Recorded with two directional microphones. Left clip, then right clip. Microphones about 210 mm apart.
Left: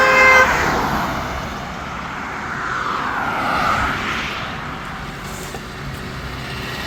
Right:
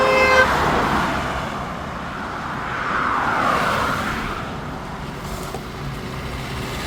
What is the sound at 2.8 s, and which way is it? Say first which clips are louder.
Vehicle: right 1 dB; 50° left (ahead or behind).